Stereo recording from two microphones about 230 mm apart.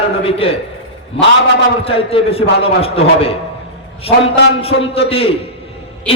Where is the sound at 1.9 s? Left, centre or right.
Left.